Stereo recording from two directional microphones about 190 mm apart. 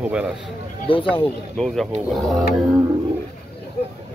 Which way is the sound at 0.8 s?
30° left (ahead or behind).